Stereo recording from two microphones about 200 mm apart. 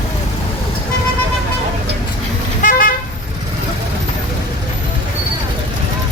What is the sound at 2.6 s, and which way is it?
Vehicle, 45° left (ahead or behind).